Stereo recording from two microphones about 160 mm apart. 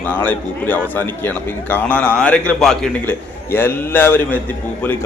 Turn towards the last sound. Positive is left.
turn(degrees=10)  # may be behind; listen again after turning